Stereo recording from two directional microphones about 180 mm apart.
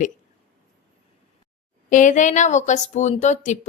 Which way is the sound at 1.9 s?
45° left (ahead or behind).